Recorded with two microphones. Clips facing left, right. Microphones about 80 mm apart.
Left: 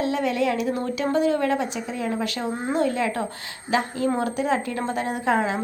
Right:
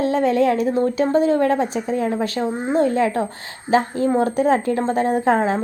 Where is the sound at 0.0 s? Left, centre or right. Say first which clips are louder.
Right 6 dB; right.